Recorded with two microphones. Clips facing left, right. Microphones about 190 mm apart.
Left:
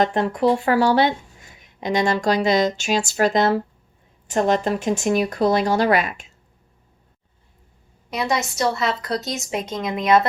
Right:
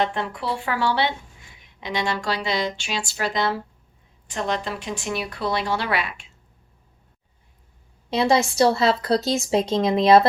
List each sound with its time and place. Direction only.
0.0 s speech: 45° left (ahead or behind)
8.1 s speech: 30° right (ahead or behind)